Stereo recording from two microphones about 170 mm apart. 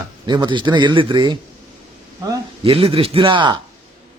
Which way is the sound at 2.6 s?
35° right (ahead or behind).